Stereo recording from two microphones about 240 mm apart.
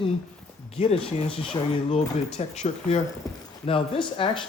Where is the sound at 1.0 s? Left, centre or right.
Left.